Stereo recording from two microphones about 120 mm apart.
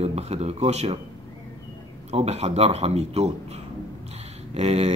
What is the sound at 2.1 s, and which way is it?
Speech, 60° right (ahead or behind).